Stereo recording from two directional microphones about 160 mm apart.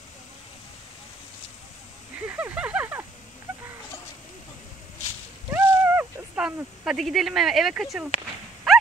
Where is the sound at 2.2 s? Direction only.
10° right (ahead or behind).